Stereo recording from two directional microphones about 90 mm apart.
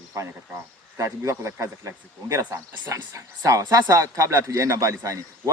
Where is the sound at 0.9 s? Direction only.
35° right (ahead or behind).